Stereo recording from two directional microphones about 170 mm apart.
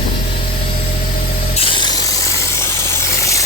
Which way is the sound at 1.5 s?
30° left (ahead or behind).